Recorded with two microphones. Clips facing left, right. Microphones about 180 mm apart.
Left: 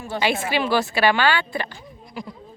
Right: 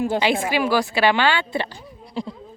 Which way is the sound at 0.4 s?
10° right (ahead or behind).